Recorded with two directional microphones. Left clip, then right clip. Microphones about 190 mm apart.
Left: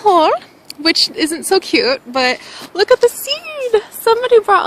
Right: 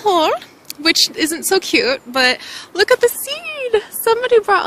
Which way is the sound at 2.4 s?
35° right (ahead or behind).